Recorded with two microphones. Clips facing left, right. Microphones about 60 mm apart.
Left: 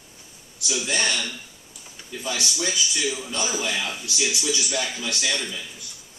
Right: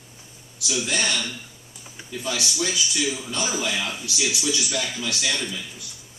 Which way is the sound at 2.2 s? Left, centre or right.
Centre.